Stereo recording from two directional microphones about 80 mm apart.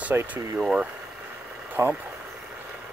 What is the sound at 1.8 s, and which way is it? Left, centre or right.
Speech, right.